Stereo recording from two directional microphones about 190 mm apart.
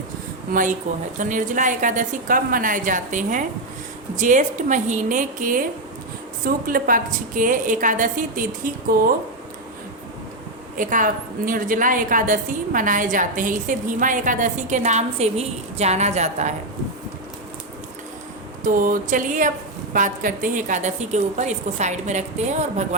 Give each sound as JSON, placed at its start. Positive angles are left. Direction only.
{"t": 0.5, "sound": "a woman's voice", "side_deg": -45}
{"t": 10.8, "sound": "a woman's voice", "side_deg": -45}
{"t": 18.6, "sound": "a woman's voice", "side_deg": -45}